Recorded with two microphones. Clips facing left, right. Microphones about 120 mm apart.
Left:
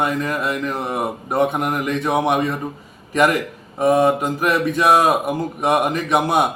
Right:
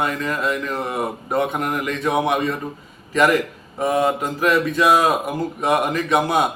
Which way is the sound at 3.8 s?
15° left (ahead or behind).